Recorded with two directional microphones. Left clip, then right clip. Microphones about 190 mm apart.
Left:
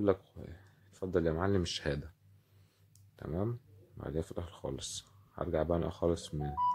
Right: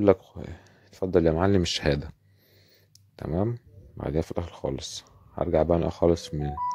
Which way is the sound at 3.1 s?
30° right (ahead or behind).